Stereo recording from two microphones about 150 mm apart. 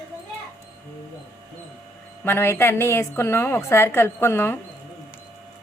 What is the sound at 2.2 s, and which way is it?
A woman's voice, 15° left (ahead or behind).